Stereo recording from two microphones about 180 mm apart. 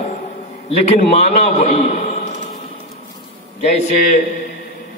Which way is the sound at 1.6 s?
40° left (ahead or behind).